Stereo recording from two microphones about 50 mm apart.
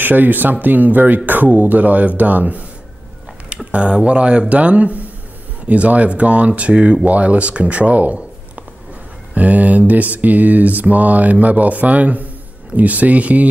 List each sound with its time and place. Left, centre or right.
0.0 s mantra: right
3.7 s speech: right
9.3 s mantra: right